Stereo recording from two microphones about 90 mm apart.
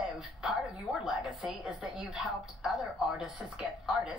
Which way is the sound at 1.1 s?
Centre (ahead or behind).